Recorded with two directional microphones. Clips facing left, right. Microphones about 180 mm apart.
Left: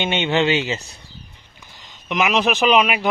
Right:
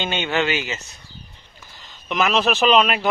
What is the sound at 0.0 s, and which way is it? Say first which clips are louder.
Speech: left 3 dB; 25° left (ahead or behind).